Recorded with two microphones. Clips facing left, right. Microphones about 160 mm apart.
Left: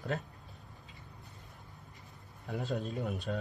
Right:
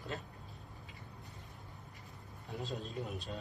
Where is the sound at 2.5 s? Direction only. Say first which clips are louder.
Left 6 dB; 70° left (ahead or behind).